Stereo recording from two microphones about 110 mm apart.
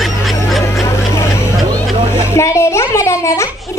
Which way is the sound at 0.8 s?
25° left (ahead or behind).